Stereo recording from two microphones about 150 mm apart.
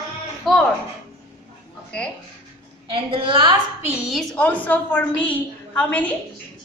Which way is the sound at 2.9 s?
35° right (ahead or behind).